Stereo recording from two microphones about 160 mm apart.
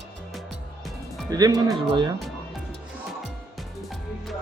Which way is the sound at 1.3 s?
25° right (ahead or behind).